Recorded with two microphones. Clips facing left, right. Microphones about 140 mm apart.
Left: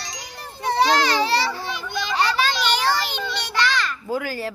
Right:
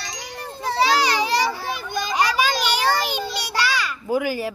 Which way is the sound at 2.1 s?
10° right (ahead or behind).